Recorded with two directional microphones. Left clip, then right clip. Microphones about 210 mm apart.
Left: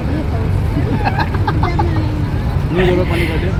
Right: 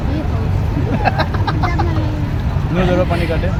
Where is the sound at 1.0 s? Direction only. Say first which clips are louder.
Right 2 dB; 25° right (ahead or behind).